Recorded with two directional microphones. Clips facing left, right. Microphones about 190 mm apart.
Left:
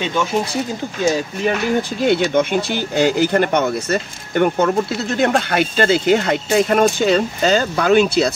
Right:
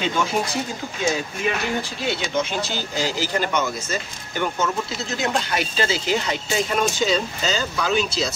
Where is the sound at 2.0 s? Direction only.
55° left (ahead or behind).